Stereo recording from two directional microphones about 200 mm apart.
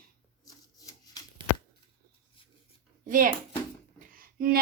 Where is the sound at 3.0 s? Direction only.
45° right (ahead or behind).